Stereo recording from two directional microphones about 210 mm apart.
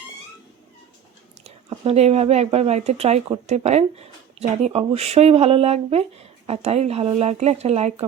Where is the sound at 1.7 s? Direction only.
30° right (ahead or behind).